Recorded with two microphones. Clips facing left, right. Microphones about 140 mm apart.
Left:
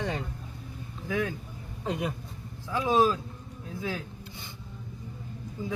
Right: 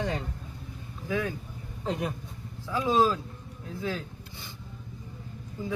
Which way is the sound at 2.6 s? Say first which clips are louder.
Even; 15° left (ahead or behind).